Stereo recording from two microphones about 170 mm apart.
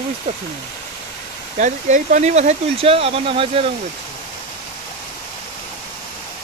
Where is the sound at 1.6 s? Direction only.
45° right (ahead or behind).